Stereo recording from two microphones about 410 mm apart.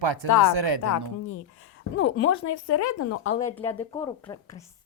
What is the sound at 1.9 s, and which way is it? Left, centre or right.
Speech, left.